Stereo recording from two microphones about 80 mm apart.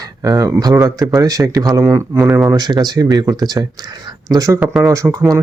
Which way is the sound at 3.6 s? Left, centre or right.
Right.